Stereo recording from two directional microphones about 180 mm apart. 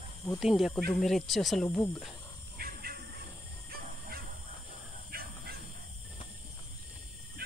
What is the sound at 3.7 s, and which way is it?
Dog, 55° right (ahead or behind).